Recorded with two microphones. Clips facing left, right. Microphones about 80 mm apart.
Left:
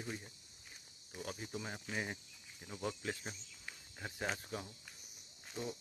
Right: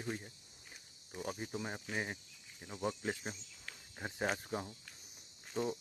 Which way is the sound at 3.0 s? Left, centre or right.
Right.